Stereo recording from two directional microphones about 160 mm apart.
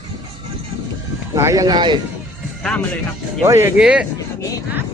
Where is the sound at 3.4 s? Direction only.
15° right (ahead or behind).